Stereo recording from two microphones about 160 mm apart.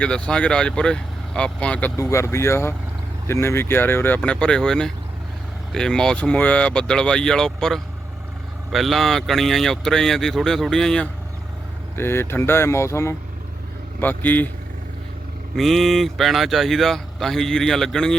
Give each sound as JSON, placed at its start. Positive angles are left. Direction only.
{"t": 0.0, "sound": "speech", "side_deg": 5}
{"t": 2.0, "sound": "speech", "side_deg": 20}
{"t": 11.9, "sound": "speech", "side_deg": 15}
{"t": 15.5, "sound": "speech", "side_deg": 0}